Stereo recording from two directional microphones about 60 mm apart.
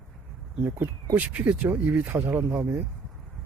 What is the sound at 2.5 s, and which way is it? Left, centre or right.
Speech, right.